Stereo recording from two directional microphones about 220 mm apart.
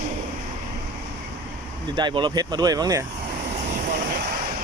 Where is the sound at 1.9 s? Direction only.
20° right (ahead or behind).